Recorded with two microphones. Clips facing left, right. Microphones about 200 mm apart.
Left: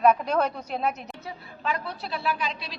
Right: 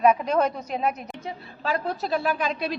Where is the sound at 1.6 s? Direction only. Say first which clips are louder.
Right 4 dB; 40° right (ahead or behind).